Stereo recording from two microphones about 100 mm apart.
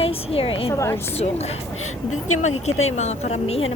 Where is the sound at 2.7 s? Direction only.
90° left.